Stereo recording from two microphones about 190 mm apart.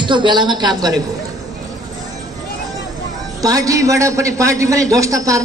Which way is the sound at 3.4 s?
20° right (ahead or behind).